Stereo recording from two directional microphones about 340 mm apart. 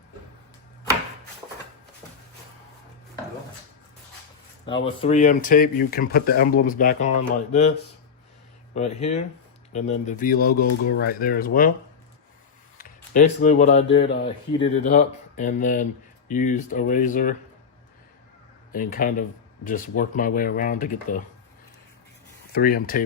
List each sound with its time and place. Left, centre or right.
5.0 s speech: left
8.7 s speech: centre
12.7 s speech: left
18.7 s speech: left
22.5 s speech: left